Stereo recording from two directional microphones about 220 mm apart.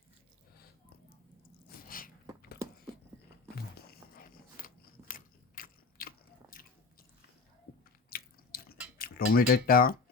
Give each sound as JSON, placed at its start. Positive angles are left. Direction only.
{"t": 1.8, "sound": "a sound", "side_deg": 40}
{"t": 3.8, "sound": "biting", "side_deg": 45}
{"t": 8.1, "sound": "biting", "side_deg": 45}
{"t": 9.0, "sound": "speech", "side_deg": 40}